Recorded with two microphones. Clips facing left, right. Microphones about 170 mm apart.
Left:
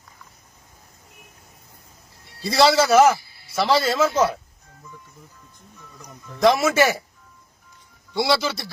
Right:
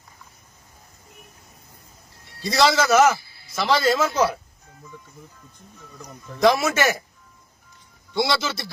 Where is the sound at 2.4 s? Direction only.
30° left (ahead or behind).